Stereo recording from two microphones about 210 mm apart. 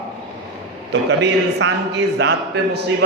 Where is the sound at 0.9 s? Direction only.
55° right (ahead or behind).